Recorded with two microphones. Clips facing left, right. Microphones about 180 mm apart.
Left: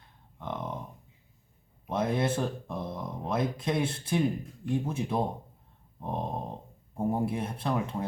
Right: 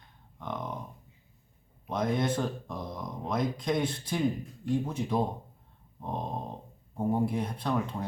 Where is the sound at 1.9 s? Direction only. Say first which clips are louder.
Left 1 dB; 5° left (ahead or behind).